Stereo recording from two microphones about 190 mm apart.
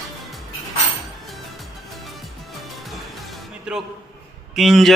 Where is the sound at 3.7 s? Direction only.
5° right (ahead or behind).